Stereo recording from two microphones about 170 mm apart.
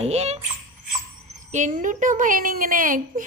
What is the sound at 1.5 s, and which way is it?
A woman's voice, 45° right (ahead or behind).